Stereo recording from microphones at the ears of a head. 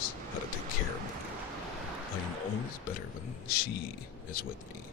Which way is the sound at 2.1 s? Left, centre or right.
Left.